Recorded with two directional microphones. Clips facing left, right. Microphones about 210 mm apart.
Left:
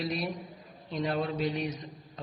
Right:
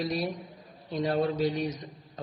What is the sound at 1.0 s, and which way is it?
Speech, 40° right (ahead or behind).